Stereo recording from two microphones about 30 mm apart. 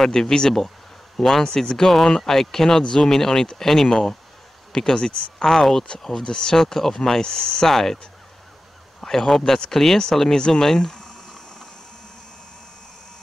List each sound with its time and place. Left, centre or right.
0.0 s speech: centre
1.4 s speech: left
5.4 s speech: centre
6.2 s speech: left
6.5 s speech: centre
7.2 s speech: left
7.6 s speech: centre